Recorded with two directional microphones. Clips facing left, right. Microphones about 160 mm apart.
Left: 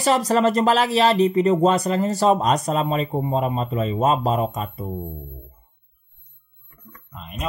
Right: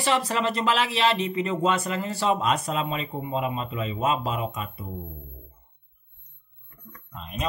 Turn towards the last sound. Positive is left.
turn(degrees=5)  # may be behind; listen again after turning